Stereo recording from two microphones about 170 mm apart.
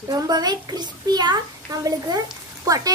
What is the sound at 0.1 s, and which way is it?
A child's voice, 25° right (ahead or behind).